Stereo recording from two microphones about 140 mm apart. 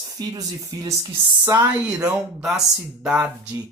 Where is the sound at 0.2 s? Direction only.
30° right (ahead or behind).